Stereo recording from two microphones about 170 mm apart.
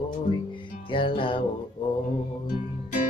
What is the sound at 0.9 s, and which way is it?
Music, 30° left (ahead or behind).